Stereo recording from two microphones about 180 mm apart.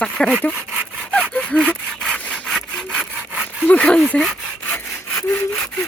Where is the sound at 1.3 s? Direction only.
5° left (ahead or behind).